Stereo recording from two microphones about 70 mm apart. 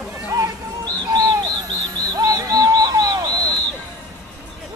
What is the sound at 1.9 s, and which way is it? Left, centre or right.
Bird, right.